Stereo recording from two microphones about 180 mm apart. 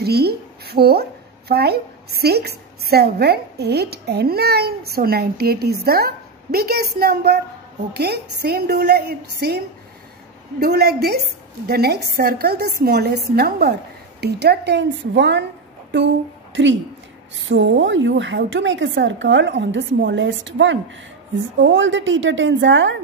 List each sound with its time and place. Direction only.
0.0 s a woman's voice: 60° right (ahead or behind)
10.6 s a woman's voice: 60° right (ahead or behind); by 15.4 s 75° right (ahead or behind)
16.5 s a woman's voice: 90° right